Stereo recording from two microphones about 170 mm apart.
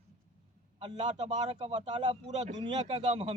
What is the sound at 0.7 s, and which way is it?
A man's voice, 35° right (ahead or behind).